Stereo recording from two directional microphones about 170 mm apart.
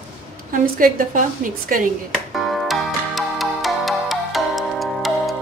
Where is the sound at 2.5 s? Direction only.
Centre (ahead or behind).